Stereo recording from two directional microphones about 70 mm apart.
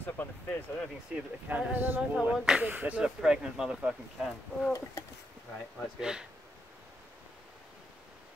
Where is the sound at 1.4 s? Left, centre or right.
Right.